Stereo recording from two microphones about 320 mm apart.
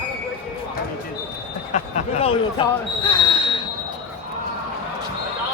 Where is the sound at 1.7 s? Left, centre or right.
Left.